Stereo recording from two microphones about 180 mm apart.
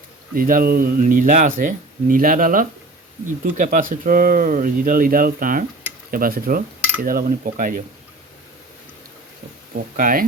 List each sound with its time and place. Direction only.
0.3 s speech: 50° right (ahead or behind)
10.0 s speech: 50° right (ahead or behind)